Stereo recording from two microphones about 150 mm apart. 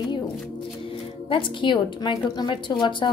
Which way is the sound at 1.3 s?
30° left (ahead or behind).